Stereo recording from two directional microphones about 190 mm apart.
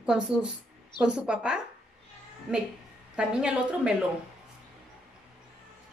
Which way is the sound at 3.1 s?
5° right (ahead or behind).